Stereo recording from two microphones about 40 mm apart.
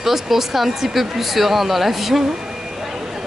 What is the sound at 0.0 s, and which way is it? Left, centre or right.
Speech, centre.